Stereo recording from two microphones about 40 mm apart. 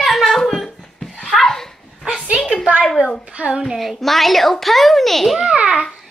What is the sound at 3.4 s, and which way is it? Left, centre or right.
Speech, right.